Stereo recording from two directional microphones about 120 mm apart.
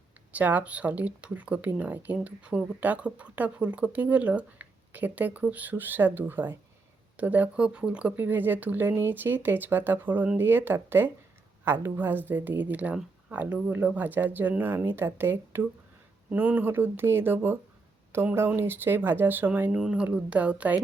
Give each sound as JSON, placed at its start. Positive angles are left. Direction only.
{"t": 0.3, "sound": "speech", "side_deg": -15}